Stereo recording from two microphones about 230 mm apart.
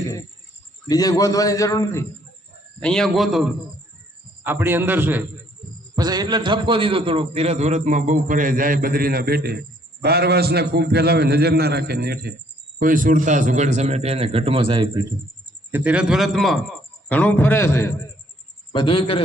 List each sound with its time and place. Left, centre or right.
0.9 s a man's voice: centre
2.8 s a man's voice: centre; by 15.0 s right
15.7 s a man's voice: centre
18.7 s a man's voice: left